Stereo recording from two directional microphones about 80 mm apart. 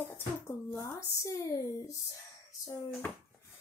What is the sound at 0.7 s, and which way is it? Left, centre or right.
Speech, left.